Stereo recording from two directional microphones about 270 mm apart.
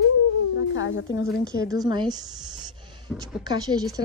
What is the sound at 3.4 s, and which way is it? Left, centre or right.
Speech, centre.